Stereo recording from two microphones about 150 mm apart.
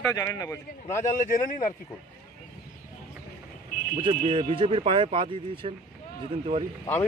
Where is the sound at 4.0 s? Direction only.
35° right (ahead or behind).